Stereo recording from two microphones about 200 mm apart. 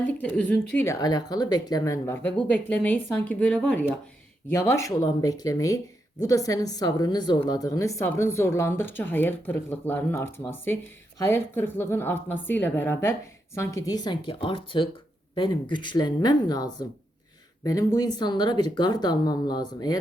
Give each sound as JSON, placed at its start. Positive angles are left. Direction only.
{"t": 0.2, "sound": "speech", "side_deg": 5}